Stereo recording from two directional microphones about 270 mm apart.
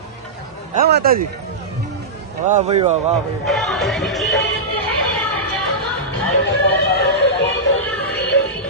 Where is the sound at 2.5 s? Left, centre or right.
Right.